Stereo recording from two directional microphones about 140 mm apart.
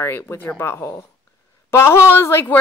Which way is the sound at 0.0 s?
15° left (ahead or behind).